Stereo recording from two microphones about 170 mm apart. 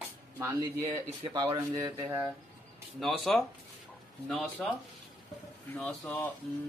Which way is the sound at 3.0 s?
Centre (ahead or behind).